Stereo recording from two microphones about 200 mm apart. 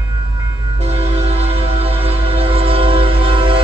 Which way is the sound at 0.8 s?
30° right (ahead or behind).